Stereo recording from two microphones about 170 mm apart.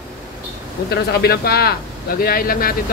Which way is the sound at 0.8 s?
70° left (ahead or behind).